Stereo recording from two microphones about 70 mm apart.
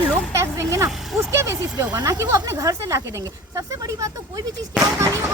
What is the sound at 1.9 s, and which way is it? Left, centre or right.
Speech, right.